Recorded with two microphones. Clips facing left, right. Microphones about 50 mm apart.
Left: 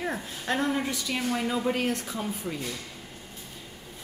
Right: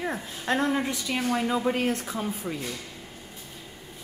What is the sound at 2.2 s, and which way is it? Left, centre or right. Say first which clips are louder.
Speech: right 2 dB; centre.